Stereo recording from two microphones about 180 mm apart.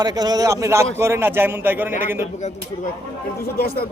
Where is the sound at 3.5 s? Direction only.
55° left (ahead or behind).